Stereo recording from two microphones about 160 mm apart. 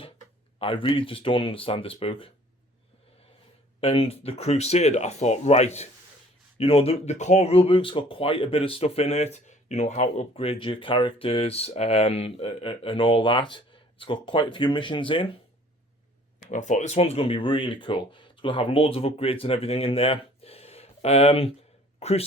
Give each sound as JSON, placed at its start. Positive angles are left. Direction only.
{"t": 0.6, "sound": "speech", "side_deg": 35}
{"t": 3.8, "sound": "speech", "side_deg": 35}
{"t": 16.4, "sound": "speech", "side_deg": 50}